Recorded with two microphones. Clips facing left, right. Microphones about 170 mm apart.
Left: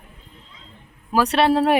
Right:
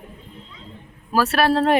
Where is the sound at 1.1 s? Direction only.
20° left (ahead or behind).